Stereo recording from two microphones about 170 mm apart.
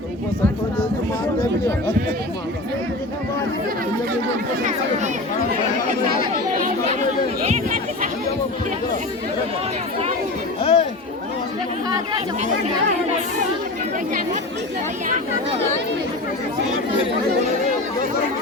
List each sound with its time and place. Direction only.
10.6 s chatter: 35° left (ahead or behind)